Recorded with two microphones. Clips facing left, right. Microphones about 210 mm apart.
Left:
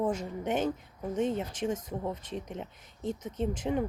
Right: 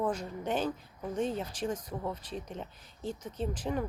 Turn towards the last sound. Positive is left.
turn(degrees=25)  # may be behind; listen again after turning